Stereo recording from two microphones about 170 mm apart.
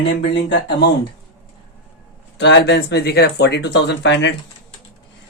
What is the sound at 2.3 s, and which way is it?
Speech, 90° left.